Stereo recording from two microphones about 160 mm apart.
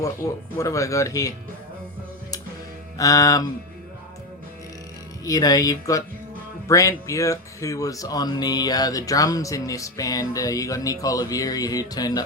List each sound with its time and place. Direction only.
0.5 s speech: 20° left (ahead or behind)
3.0 s speech: 20° left (ahead or behind)
5.2 s speech: 25° left (ahead or behind)